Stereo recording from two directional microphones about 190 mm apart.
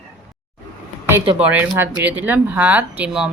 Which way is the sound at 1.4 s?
10° right (ahead or behind).